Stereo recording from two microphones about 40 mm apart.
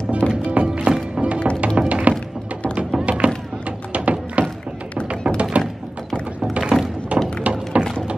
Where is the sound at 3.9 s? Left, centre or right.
Right.